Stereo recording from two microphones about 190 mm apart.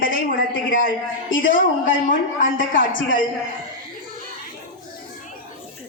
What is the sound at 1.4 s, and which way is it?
Speech, 45° left (ahead or behind).